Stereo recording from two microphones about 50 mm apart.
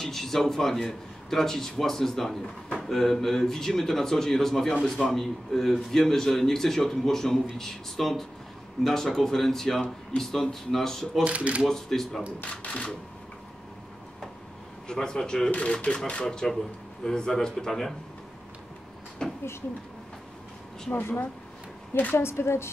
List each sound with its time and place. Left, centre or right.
0.0 s a man's voice: centre
11.2 s speech: right
11.6 s a man's voice: centre
12.4 s speech: left
14.9 s a man's voice: centre
15.5 s a man's voice: left; by 17.9 s centre
19.2 s a sound: centre
22.1 s a woman's voice: left